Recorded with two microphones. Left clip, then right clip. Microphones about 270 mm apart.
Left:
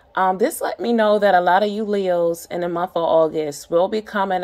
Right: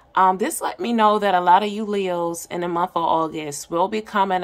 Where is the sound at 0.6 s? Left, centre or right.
Right.